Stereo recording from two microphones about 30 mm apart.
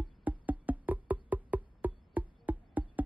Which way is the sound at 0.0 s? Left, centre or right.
Right.